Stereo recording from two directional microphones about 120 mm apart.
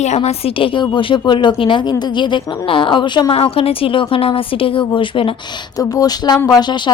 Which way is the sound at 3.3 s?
50° left (ahead or behind).